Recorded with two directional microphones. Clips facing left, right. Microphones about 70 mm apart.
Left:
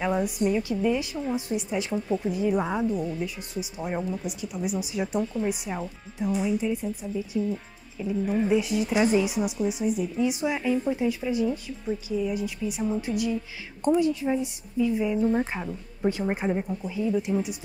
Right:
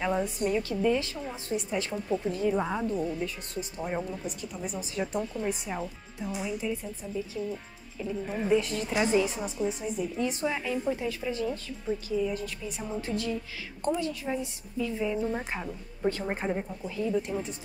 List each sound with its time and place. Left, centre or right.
0.0 s a woman's voice: centre
6.6 s a woman's voice: centre
7.2 s a woman's voice: centre